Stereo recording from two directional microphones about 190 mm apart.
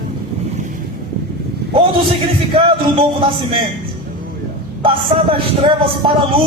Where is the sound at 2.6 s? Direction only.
30° right (ahead or behind).